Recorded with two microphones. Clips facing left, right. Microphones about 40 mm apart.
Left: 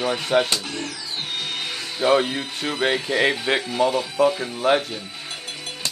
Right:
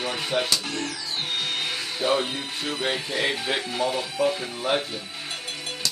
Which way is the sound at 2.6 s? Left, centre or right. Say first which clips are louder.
Left 5 dB; centre.